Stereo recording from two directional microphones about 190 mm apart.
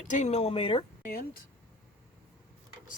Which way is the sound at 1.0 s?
50° left (ahead or behind).